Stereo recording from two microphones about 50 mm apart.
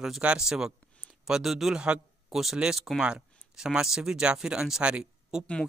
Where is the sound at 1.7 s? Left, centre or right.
Right.